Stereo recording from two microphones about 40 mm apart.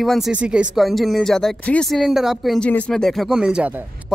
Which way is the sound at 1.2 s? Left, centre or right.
Centre.